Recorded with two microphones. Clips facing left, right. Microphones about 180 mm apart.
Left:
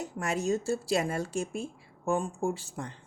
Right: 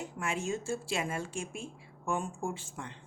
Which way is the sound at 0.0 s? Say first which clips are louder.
Left 4 dB; 40° left (ahead or behind).